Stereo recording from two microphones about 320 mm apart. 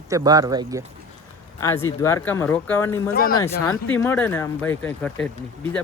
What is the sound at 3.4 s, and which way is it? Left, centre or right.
Speech, centre.